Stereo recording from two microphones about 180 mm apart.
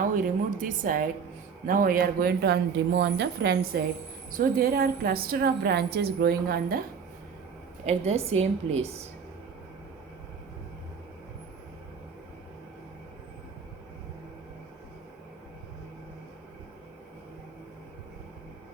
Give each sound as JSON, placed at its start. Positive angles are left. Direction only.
{"t": 0.6, "sound": "a woman's voice", "side_deg": -50}
{"t": 7.9, "sound": "a woman's voice", "side_deg": -35}